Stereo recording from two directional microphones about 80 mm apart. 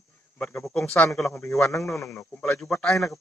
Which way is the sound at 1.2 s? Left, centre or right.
Left.